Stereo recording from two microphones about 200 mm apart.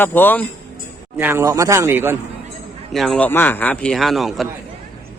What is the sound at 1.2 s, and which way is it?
Speech, 10° right (ahead or behind).